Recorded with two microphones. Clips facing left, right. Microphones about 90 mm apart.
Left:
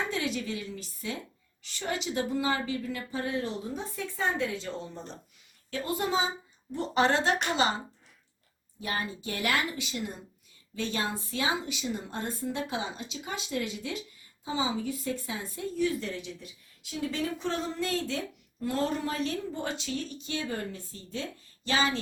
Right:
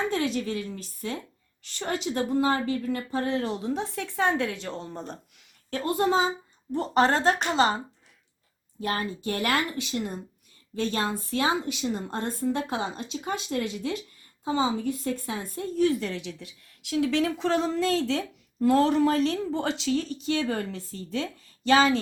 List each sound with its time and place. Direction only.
0.3 s a woman's voice: 50° right (ahead or behind)
3.2 s speech: 65° right (ahead or behind)
5.7 s a woman's voice: 45° right (ahead or behind)
8.8 s a woman's voice: 50° right (ahead or behind); by 17.6 s 90° right
18.6 s speech: 85° right